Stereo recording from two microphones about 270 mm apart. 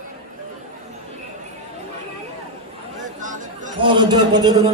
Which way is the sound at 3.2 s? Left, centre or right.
Right.